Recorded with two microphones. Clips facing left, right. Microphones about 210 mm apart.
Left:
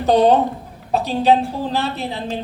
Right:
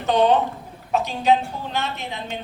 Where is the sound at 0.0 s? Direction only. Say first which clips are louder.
Left 4 dB; 35° left (ahead or behind).